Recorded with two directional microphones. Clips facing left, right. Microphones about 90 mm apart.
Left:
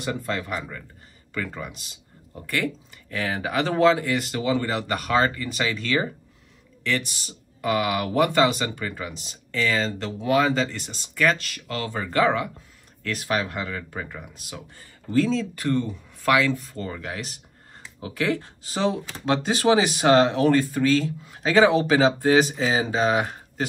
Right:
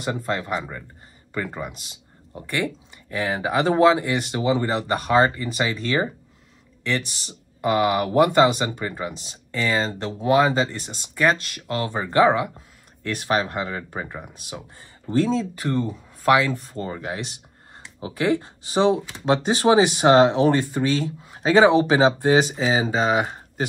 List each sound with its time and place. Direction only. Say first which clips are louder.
0.0 s speech: right 2 dB; 30° right (ahead or behind)
8.6 s speech: right 3 dB; 20° right (ahead or behind)
9.2 s speech: left 4 dB; 35° right (ahead or behind)
13.3 s speech: right 3 dB; 35° right (ahead or behind)
13.6 s speech: right 3 dB; 25° right (ahead or behind)